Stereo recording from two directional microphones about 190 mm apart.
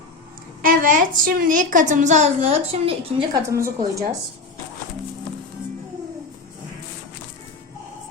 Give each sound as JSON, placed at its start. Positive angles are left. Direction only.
{"t": 0.6, "sound": "a woman's voice", "side_deg": -45}
{"t": 3.5, "sound": "a woman's voice", "side_deg": -15}